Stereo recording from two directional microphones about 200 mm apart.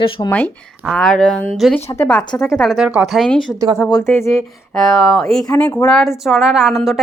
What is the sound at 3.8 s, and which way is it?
Speech, 15° left (ahead or behind).